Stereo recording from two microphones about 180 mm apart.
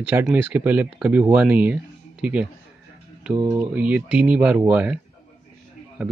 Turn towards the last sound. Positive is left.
turn(degrees=-5)  # may be behind; listen again after turning